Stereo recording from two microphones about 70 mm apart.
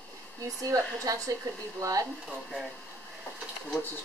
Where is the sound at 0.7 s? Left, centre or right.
Right.